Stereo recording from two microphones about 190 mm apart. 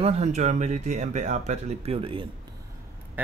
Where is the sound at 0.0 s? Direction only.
35° right (ahead or behind).